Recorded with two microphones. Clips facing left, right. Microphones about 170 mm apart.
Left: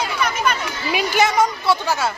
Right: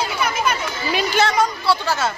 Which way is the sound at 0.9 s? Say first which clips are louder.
Left 1 dB; 10° left (ahead or behind).